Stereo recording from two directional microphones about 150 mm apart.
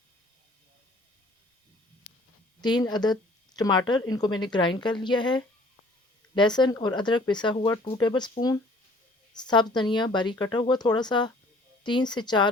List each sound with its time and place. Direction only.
2.6 s speech: 30° left (ahead or behind)